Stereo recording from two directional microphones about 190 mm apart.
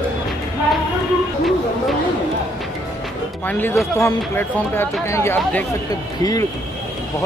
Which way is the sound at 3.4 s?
10° left (ahead or behind).